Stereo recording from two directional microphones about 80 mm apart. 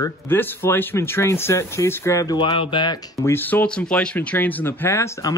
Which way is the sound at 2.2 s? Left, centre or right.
Left.